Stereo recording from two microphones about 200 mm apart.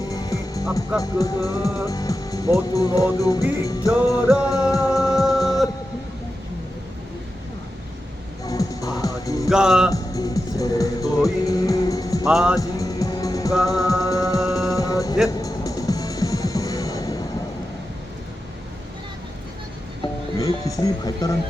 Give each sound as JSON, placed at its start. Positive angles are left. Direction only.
{"t": 0.1, "sound": "music", "side_deg": 15}
{"t": 1.9, "sound": "speech", "side_deg": 15}
{"t": 2.7, "sound": "music", "side_deg": 15}
{"t": 8.4, "sound": "music", "side_deg": 15}
{"t": 9.5, "sound": "speech", "side_deg": -5}
{"t": 9.9, "sound": "music", "side_deg": 15}
{"t": 12.2, "sound": "music", "side_deg": -5}
{"t": 12.5, "sound": "music", "side_deg": 15}
{"t": 20.4, "sound": "speech", "side_deg": 15}